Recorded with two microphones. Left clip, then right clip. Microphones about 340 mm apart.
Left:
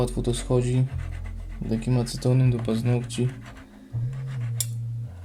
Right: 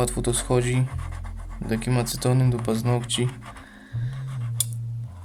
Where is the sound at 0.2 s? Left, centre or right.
Right.